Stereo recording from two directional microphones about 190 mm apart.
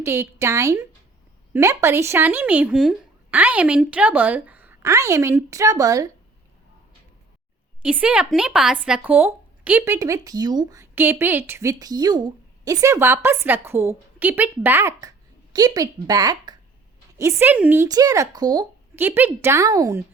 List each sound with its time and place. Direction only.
0.0 s speech: 15° right (ahead or behind)
7.8 s speech: 5° right (ahead or behind)